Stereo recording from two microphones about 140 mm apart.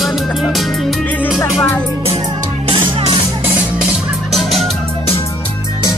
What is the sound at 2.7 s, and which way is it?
Music, 40° right (ahead or behind).